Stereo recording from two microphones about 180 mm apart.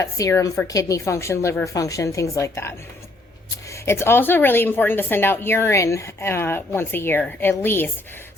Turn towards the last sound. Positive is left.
turn(degrees=10)  # may be behind; listen again after turning